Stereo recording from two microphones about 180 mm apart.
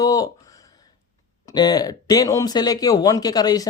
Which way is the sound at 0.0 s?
20° left (ahead or behind).